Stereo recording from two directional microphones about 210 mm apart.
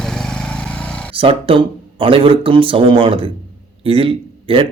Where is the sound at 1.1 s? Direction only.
25° right (ahead or behind).